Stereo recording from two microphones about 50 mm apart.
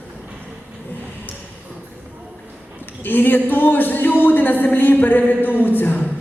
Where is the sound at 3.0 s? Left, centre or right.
Left.